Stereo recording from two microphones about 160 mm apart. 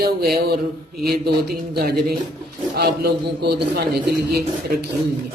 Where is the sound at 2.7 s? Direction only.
75° right (ahead or behind).